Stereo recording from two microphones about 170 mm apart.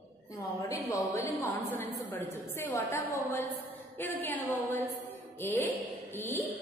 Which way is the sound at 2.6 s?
15° left (ahead or behind).